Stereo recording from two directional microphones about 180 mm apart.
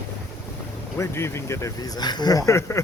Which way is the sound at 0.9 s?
15° left (ahead or behind).